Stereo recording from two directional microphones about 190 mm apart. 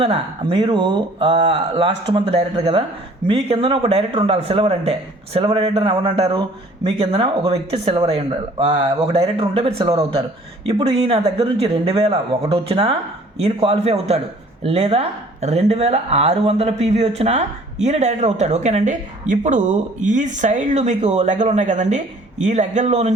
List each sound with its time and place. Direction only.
0.0 s speech: 25° right (ahead or behind)